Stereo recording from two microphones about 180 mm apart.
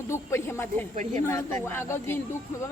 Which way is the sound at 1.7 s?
10° left (ahead or behind).